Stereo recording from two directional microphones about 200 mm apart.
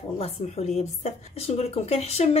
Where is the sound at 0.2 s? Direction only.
30° left (ahead or behind).